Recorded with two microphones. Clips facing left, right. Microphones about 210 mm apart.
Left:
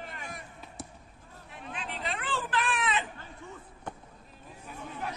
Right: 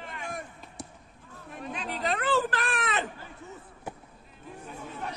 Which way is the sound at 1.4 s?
40° right (ahead or behind).